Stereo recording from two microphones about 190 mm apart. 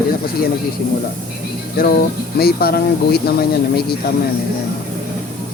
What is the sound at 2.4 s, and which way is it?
Speech, 55° left (ahead or behind).